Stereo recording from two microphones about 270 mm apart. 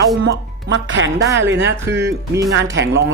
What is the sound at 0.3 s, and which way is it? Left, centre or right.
Speech, right.